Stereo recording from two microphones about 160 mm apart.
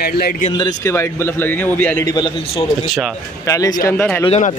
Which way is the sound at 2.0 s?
25° left (ahead or behind).